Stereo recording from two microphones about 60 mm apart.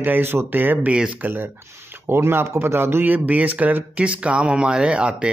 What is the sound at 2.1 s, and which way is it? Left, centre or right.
Speech, right.